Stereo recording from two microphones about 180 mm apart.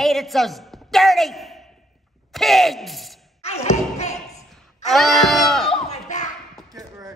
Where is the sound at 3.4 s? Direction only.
35° left (ahead or behind).